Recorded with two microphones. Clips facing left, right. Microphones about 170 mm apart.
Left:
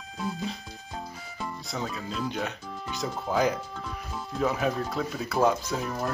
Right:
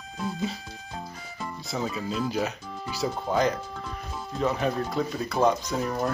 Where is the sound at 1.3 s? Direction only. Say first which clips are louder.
Right 2 dB; centre (ahead or behind).